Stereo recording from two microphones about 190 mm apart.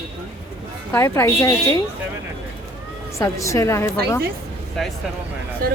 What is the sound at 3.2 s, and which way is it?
A woman's voice, 15° left (ahead or behind).